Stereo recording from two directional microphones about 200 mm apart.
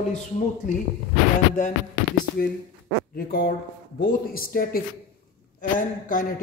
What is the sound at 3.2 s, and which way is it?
A man's voice, 50° left (ahead or behind).